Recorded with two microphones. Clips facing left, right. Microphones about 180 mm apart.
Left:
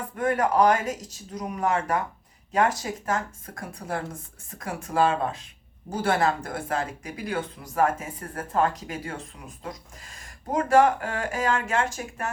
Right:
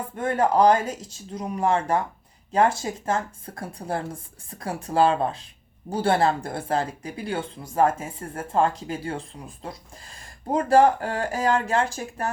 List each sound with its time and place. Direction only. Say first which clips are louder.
0.2 s speech: right 2 dB; 30° right (ahead or behind)
10.5 s speech: right 2 dB; 35° right (ahead or behind)